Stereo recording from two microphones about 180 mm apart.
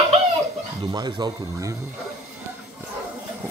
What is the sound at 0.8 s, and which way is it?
Speech, 25° right (ahead or behind).